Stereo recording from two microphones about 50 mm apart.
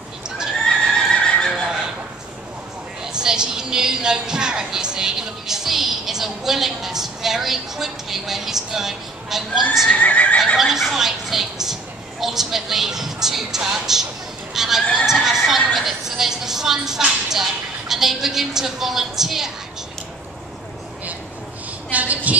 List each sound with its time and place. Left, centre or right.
0.7 s neigh: centre
3.0 s a woman's voice: centre
9.8 s neigh: left
10.6 s a woman's voice: centre
21.9 s a sound: right